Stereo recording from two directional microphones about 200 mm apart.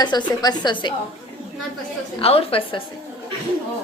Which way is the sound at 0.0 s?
20° left (ahead or behind).